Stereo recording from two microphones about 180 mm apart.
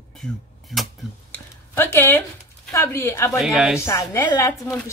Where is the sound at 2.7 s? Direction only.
15° left (ahead or behind).